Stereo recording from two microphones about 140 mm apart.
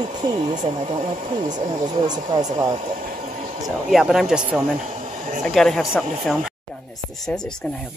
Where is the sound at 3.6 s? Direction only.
Centre (ahead or behind).